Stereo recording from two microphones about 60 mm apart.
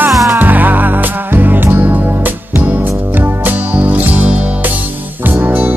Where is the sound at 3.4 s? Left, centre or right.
Right.